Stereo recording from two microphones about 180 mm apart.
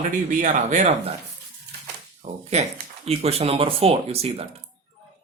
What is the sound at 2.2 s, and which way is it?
Speech, 35° right (ahead or behind).